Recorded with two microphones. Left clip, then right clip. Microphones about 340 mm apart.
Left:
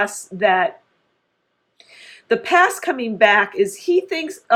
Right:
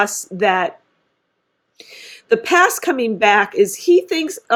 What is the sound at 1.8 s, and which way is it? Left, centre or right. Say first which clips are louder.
Speech: right 5 dB; right.